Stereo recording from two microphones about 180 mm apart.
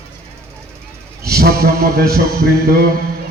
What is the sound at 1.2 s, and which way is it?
Speech, 60° right (ahead or behind).